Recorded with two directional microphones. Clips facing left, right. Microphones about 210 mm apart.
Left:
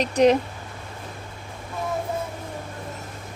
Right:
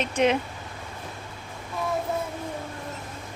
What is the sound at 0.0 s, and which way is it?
Speech, 35° left (ahead or behind).